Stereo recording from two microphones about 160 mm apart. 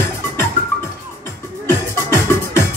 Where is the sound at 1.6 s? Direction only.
15° left (ahead or behind).